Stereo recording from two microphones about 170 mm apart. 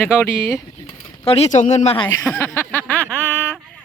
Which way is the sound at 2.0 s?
15° left (ahead or behind).